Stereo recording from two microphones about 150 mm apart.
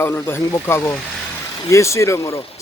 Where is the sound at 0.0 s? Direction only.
15° left (ahead or behind).